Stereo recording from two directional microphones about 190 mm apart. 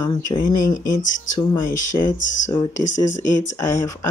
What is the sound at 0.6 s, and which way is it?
Speech, 45° left (ahead or behind).